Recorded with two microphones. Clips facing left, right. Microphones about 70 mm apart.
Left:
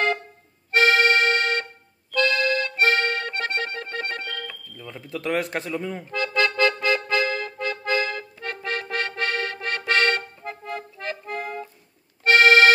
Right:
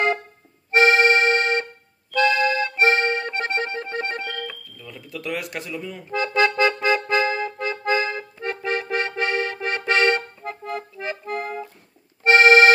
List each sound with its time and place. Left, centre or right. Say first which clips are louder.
0.7 s accordion: right 2 dB; right
4.7 s speech: left 2 dB; left
6.1 s music: right 3 dB; centre
10.6 s accordion: right 3 dB; centre
12.2 s accordion: right 2 dB; right